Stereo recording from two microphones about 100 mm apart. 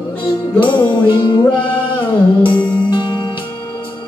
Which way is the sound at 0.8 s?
50° left (ahead or behind).